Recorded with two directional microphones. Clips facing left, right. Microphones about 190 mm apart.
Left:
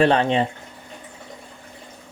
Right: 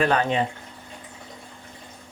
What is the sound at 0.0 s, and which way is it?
Speech, 25° left (ahead or behind).